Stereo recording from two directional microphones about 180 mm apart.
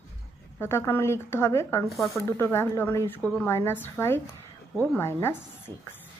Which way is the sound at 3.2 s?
Centre (ahead or behind).